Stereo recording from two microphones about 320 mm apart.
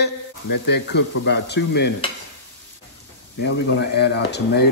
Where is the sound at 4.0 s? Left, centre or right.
Left.